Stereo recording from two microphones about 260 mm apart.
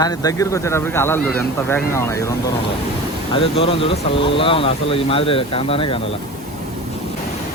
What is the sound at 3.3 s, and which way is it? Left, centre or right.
Speech, left.